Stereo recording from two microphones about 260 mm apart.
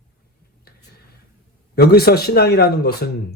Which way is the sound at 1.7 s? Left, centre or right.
Left.